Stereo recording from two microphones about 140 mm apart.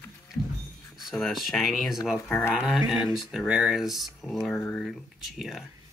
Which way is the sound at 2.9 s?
5° right (ahead or behind).